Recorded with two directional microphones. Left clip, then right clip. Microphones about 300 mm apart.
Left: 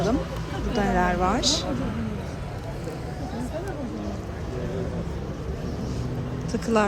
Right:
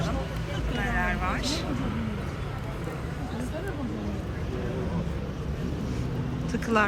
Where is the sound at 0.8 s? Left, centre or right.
Centre.